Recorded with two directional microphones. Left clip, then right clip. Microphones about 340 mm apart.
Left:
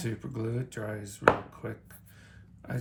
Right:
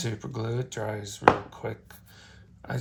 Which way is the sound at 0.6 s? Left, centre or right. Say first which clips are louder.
Right 5 dB; centre.